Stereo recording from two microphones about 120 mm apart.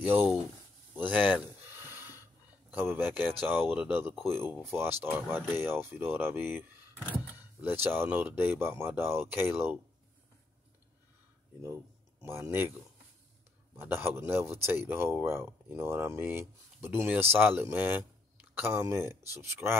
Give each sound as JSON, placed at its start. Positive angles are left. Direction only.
{"t": 0.0, "sound": "speech", "side_deg": -15}
{"t": 1.8, "sound": "snort", "side_deg": -20}
{"t": 2.7, "sound": "speech", "side_deg": -20}
{"t": 7.6, "sound": "speech", "side_deg": -20}
{"t": 11.6, "sound": "speech", "side_deg": -20}
{"t": 13.7, "sound": "speech", "side_deg": -20}